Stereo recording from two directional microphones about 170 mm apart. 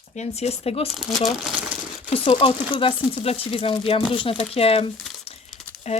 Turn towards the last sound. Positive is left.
turn(degrees=40)  # may be behind; listen again after turning